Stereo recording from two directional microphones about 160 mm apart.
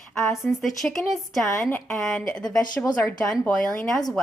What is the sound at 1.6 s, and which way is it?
Speech, 15° left (ahead or behind).